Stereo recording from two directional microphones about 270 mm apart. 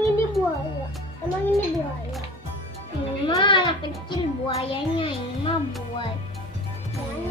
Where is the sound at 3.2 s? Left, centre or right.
Centre.